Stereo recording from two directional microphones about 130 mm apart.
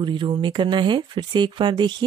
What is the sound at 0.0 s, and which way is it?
Speech, 35° right (ahead or behind).